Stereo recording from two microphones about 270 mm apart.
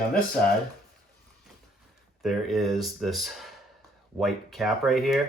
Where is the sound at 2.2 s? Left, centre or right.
Centre.